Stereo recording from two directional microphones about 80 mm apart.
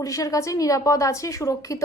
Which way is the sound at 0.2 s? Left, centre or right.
Left.